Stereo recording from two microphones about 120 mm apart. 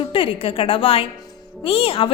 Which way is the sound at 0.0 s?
50° left (ahead or behind).